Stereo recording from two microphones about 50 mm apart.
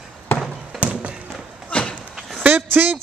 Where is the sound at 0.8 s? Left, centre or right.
Right.